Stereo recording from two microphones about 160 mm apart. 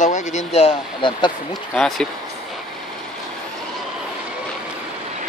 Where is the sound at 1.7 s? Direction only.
Centre (ahead or behind).